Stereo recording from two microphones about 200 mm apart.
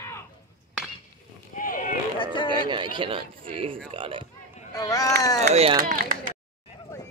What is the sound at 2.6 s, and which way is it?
Speech, 25° right (ahead or behind).